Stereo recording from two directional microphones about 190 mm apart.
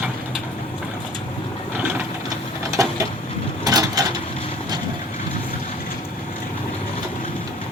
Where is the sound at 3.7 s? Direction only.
20° right (ahead or behind).